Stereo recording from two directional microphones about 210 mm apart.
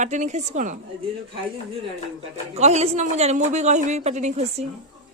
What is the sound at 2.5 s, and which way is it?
Speech, 30° right (ahead or behind).